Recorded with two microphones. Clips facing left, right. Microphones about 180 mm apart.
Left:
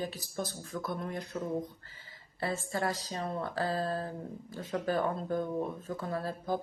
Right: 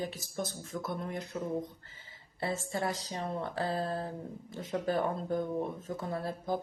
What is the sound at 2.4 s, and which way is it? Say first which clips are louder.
Speech: left 1 dB; 20° right (ahead or behind).